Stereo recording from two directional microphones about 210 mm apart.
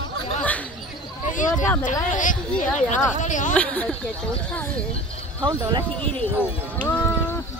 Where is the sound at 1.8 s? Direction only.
40° left (ahead or behind).